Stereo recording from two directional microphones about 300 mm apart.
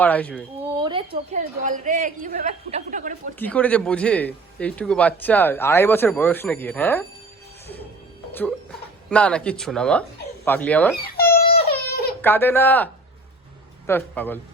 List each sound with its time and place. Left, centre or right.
0.0 s speech: centre
0.8 s a woman's voice: centre
3.3 s speech: centre
8.3 s speech: centre
10.9 s babbling: left
12.2 s speech: centre